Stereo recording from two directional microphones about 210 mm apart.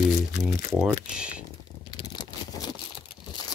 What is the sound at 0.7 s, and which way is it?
Speech, 5° right (ahead or behind).